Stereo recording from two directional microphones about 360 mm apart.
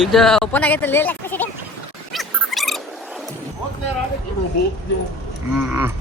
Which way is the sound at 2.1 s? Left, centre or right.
Centre.